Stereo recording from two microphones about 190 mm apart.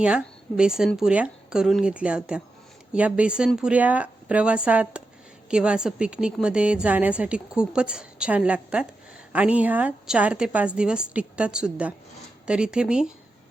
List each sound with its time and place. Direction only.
0.0 s a woman's voice: 5° right (ahead or behind)